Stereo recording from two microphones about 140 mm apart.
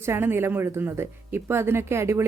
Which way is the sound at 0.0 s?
15° right (ahead or behind).